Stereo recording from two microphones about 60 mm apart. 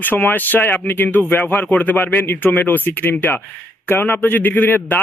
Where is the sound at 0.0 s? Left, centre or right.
Left.